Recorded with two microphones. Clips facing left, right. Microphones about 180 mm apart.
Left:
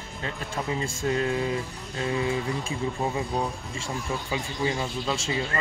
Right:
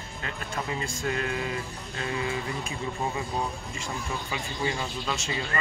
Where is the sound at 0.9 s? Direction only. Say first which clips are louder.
Left 4 dB; 25° left (ahead or behind).